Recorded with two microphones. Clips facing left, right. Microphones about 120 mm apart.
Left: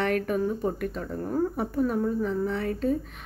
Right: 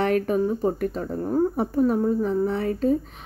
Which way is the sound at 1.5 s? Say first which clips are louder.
Right 5 dB; 30° right (ahead or behind).